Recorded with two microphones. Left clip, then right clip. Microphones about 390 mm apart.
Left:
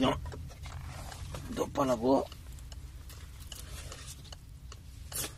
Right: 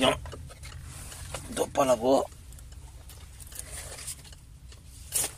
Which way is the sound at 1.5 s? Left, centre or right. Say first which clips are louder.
Right 6 dB; right.